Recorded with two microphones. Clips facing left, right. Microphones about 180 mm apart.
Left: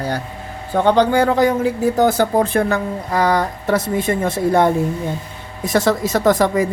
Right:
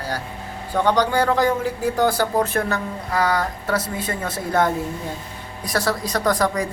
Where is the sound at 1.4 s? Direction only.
20° left (ahead or behind).